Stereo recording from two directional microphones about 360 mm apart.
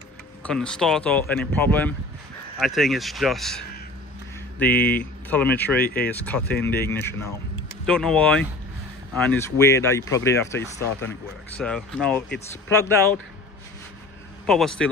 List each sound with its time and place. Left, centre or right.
0.5 s speech: centre
14.4 s speech: centre